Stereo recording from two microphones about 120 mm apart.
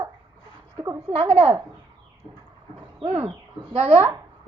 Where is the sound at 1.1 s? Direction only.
65° right (ahead or behind).